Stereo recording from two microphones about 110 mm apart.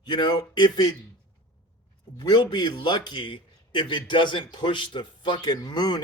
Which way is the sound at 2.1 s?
40° left (ahead or behind).